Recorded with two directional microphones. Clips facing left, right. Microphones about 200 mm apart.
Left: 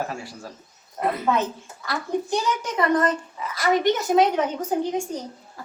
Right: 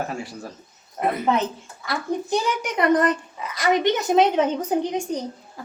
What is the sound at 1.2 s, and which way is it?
Speech, 20° right (ahead or behind).